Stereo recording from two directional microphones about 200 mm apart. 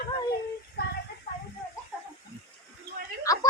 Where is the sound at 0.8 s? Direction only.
55° left (ahead or behind).